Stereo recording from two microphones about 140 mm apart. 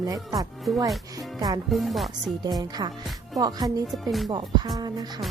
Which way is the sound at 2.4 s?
30° right (ahead or behind).